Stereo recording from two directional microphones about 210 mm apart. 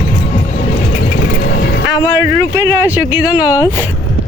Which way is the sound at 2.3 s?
15° right (ahead or behind).